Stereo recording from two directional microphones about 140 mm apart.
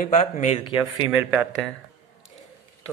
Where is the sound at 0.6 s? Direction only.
35° left (ahead or behind).